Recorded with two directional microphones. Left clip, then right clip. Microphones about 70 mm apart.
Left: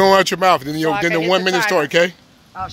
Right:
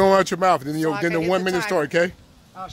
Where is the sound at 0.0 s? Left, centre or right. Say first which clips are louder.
Left 4 dB; right.